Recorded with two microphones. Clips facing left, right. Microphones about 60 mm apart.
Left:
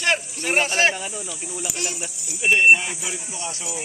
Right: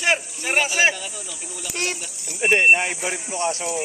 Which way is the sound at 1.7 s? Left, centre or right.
Right.